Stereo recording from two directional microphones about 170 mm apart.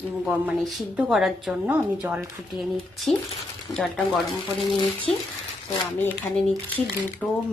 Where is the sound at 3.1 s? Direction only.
Centre (ahead or behind).